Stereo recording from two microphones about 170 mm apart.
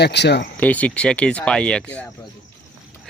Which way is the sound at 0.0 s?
80° left.